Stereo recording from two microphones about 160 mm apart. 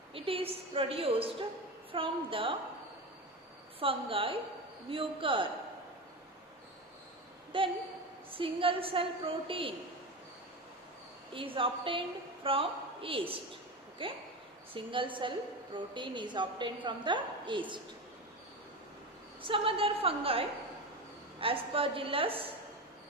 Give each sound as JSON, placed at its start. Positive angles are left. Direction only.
{"t": 0.1, "sound": "a woman's voice", "side_deg": -35}
{"t": 3.8, "sound": "a woman's voice", "side_deg": -35}
{"t": 7.5, "sound": "a woman's voice", "side_deg": -30}
{"t": 11.3, "sound": "a woman's voice", "side_deg": -35}
{"t": 19.4, "sound": "a woman's voice", "side_deg": -35}